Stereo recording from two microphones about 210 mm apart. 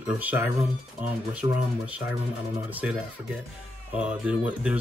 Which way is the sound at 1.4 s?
20° right (ahead or behind).